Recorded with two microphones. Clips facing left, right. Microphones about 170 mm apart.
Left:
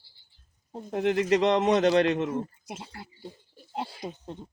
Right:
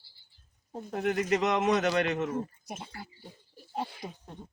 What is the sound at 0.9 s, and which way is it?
Speech, 25° left (ahead or behind).